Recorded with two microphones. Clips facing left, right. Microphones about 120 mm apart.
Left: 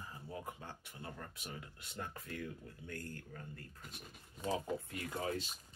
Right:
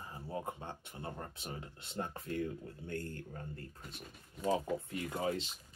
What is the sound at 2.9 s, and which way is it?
Speech, 30° right (ahead or behind).